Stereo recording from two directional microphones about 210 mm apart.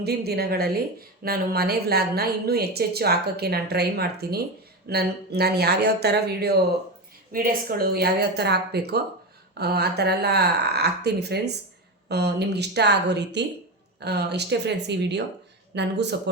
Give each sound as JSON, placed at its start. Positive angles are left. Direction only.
{"t": 0.0, "sound": "a woman's voice", "side_deg": -50}